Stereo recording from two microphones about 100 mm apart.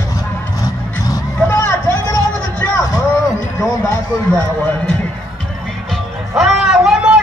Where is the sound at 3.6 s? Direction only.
25° left (ahead or behind).